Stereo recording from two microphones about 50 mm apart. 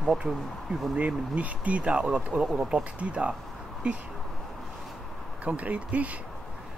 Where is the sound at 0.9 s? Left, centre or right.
Right.